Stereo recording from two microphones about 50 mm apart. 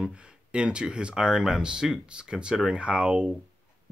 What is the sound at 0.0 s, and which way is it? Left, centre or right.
Speech, right.